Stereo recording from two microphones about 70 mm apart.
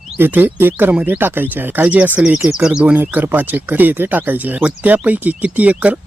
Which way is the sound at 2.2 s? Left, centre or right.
Centre.